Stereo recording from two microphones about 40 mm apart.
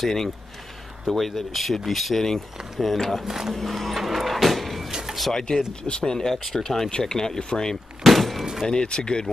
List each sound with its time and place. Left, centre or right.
0.0 s speech: centre
3.3 s speech: centre
3.5 s vehicle: centre
4.9 s a sound: centre
5.3 s speech: centre
8.0 s a sound: centre
8.6 s speech: left